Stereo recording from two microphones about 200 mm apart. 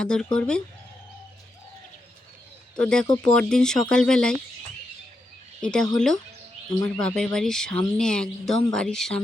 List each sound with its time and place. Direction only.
0.0 s speech: 5° left (ahead or behind)
2.7 s speech: 5° left (ahead or behind)
5.6 s speech: 5° left (ahead or behind)
6.7 s speech: 20° left (ahead or behind)
7.0 s speech: centre (ahead or behind)